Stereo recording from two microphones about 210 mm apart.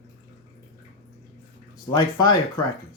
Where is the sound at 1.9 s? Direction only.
20° left (ahead or behind).